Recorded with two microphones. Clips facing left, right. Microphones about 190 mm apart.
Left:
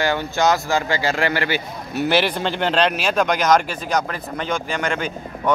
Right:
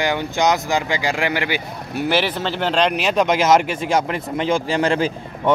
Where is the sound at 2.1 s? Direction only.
10° left (ahead or behind).